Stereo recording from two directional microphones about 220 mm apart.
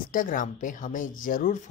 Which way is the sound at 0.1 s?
35° left (ahead or behind).